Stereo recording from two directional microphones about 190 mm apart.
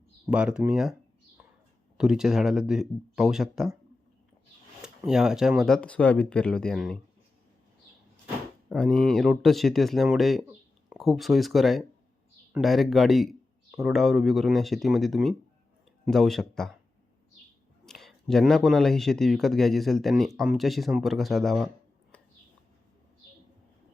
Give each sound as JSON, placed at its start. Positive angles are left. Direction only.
{"t": 0.3, "sound": "speech", "side_deg": -5}
{"t": 2.0, "sound": "speech", "side_deg": 0}
{"t": 4.8, "sound": "speech", "side_deg": -5}
{"t": 8.7, "sound": "speech", "side_deg": 5}
{"t": 17.8, "sound": "speech", "side_deg": 0}